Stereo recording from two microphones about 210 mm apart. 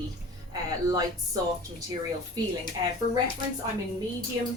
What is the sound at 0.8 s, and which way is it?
Speech, 20° right (ahead or behind).